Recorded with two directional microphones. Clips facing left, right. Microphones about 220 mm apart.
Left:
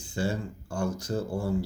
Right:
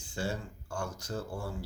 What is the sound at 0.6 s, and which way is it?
Speech, 15° left (ahead or behind).